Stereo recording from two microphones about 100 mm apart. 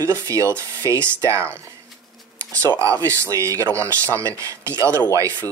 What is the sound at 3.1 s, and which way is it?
Speech, 30° right (ahead or behind).